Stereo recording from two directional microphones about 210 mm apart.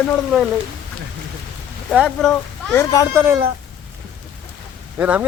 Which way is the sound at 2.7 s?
15° left (ahead or behind).